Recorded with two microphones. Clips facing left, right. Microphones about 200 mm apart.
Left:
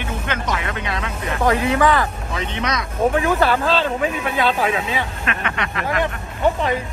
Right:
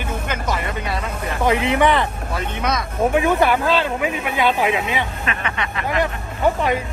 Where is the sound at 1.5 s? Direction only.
20° right (ahead or behind).